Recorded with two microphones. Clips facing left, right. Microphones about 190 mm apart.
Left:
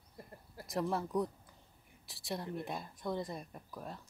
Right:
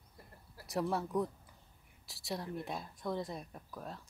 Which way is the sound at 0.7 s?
Centre (ahead or behind).